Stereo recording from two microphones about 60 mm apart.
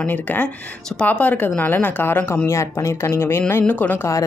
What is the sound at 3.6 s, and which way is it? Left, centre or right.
Speech, left.